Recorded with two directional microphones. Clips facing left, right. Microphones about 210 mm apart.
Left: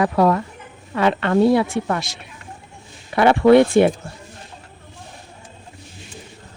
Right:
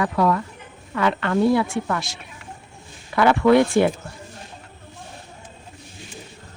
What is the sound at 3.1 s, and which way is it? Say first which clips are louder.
Speech: left 3 dB; 30° left (ahead or behind).